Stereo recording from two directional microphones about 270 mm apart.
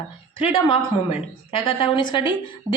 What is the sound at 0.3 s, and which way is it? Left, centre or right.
A woman's voice, centre.